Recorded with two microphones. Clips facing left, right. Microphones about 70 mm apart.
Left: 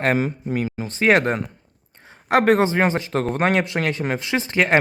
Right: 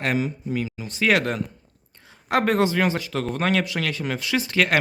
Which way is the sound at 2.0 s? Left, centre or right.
Left.